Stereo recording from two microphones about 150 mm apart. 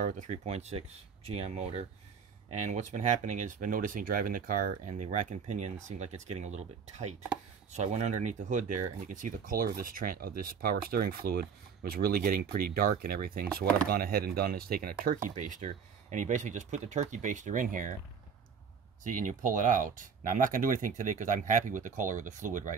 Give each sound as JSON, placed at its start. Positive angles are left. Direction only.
{"t": 0.0, "sound": "speech", "side_deg": -55}
{"t": 19.0, "sound": "speech", "side_deg": -60}